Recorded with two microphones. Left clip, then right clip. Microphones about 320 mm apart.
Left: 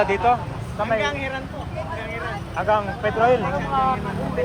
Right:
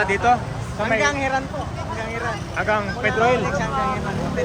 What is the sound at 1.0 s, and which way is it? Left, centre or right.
Speech, centre.